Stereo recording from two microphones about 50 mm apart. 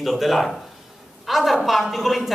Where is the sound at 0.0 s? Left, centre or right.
Centre.